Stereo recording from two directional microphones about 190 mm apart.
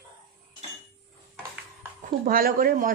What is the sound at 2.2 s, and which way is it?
Speech, 50° right (ahead or behind).